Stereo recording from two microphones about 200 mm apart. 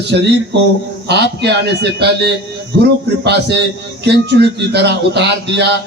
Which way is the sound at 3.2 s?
55° right (ahead or behind).